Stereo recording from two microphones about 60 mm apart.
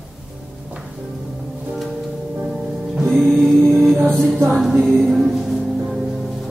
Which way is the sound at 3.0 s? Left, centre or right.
Centre.